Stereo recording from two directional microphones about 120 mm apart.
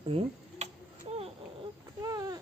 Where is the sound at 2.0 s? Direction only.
30° right (ahead or behind).